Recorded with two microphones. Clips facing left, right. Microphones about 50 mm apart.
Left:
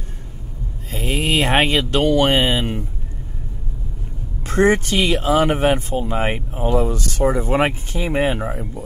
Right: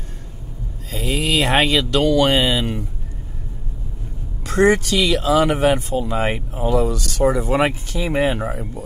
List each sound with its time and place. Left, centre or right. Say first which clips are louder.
0.9 s speech: even; left
4.5 s speech: even; left
8.5 s speech: even; left